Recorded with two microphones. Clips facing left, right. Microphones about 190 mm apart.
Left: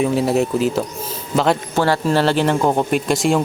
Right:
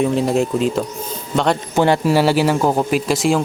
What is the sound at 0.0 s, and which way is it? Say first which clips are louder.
Speech: even; 5° left (ahead or behind).